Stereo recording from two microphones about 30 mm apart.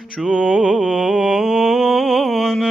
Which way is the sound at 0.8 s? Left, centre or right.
Right.